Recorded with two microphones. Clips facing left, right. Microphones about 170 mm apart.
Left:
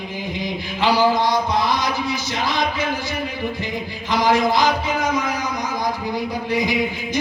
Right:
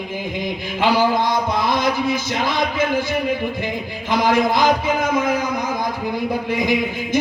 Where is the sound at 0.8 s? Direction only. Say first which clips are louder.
Even; 50° right (ahead or behind).